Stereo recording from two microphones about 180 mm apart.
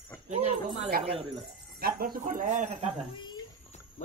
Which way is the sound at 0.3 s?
40° right (ahead or behind).